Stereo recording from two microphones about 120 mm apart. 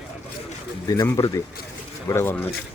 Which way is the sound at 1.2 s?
30° left (ahead or behind).